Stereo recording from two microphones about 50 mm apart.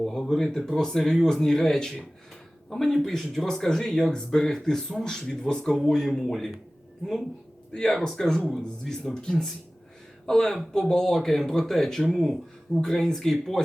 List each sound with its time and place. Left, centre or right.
0.0 s speech: centre
7.7 s speech: centre